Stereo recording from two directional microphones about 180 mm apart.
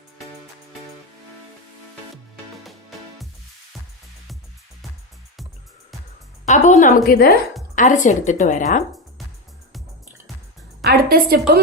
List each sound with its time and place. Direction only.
6.4 s a woman's voice: 40° left (ahead or behind)
7.8 s a woman's voice: 45° left (ahead or behind)
10.8 s a woman's voice: 60° right (ahead or behind)